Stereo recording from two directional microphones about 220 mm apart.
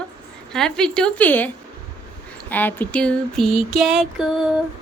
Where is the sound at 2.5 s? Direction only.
10° left (ahead or behind).